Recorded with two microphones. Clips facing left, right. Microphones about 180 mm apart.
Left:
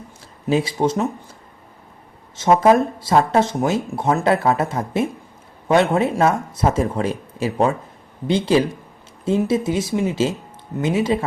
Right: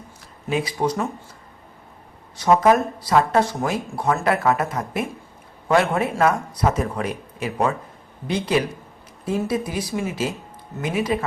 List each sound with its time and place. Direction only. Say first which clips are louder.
0.4 s speech: left 4 dB; 25° left (ahead or behind)
2.3 s speech: left 2 dB; 25° left (ahead or behind)